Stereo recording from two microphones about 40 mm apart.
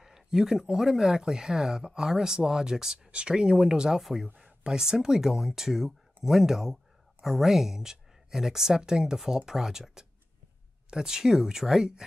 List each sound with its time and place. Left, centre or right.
0.0 s speech: centre
3.1 s speech: right
4.0 s speech: centre